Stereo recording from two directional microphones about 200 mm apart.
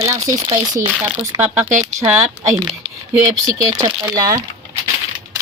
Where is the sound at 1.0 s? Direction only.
10° right (ahead or behind).